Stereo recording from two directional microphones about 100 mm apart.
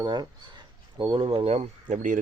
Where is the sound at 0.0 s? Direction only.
45° right (ahead or behind); by 1.6 s 80° right.